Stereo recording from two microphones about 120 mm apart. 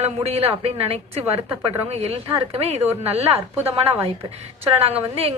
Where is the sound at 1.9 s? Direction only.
60° right (ahead or behind).